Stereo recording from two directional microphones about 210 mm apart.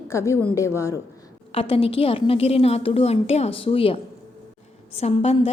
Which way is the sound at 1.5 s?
25° left (ahead or behind).